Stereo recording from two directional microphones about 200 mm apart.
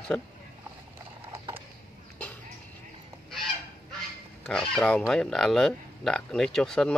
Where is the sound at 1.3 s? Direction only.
25° right (ahead or behind).